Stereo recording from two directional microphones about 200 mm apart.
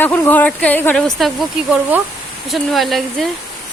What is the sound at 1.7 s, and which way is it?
Speech, 10° right (ahead or behind).